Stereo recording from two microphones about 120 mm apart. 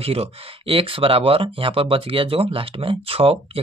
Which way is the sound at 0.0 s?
55° right (ahead or behind).